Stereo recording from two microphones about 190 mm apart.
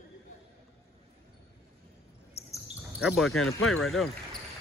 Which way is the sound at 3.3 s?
90° left.